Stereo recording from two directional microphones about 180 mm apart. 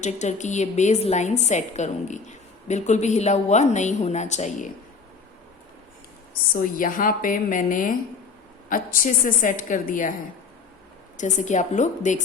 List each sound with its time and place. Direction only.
0.0 s a woman's voice: 40° left (ahead or behind)
6.5 s a woman's voice: 50° left (ahead or behind)
11.2 s a woman's voice: 45° left (ahead or behind)